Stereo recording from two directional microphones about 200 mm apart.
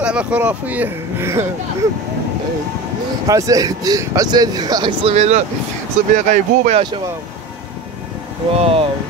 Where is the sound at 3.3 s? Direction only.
15° right (ahead or behind); by 6.8 s 35° right (ahead or behind).